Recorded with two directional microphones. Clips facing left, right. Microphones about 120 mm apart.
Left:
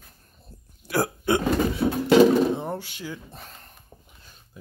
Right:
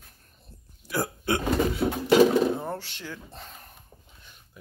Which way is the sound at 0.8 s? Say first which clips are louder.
Left 4 dB; 70° left (ahead or behind).